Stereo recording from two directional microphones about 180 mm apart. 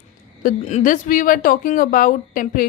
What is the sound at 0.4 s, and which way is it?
Speech, 45° left (ahead or behind).